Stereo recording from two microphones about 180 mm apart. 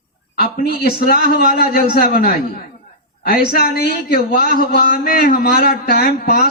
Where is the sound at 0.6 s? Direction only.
55° left (ahead or behind).